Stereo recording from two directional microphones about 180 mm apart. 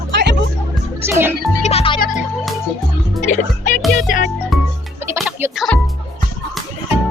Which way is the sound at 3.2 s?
45° left (ahead or behind).